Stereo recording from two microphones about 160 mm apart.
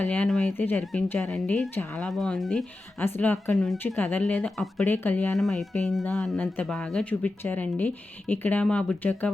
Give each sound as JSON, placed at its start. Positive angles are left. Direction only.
{"t": 0.0, "sound": "speech", "side_deg": 5}